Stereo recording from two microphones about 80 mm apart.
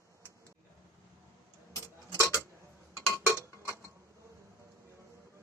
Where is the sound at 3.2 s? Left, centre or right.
Right.